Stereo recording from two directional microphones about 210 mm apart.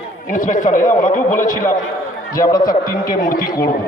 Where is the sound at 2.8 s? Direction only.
40° left (ahead or behind).